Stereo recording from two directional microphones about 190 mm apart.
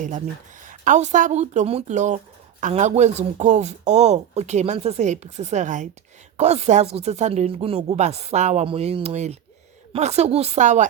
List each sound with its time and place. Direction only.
0.6 s speech: 45° right (ahead or behind)